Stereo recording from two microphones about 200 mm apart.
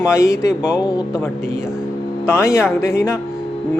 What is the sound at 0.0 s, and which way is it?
Speech, 15° left (ahead or behind).